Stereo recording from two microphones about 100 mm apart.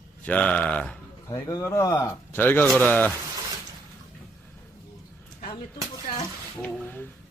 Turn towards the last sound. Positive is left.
turn(degrees=20)  # may be behind; listen again after turning